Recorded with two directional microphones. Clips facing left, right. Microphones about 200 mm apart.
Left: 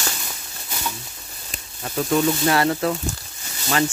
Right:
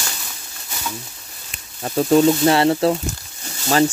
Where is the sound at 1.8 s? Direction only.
30° right (ahead or behind).